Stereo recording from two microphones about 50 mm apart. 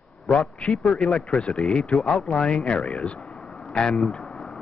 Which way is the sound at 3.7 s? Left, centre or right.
Centre.